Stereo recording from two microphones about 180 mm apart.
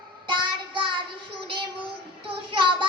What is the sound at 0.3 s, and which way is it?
Child singing, 25° right (ahead or behind).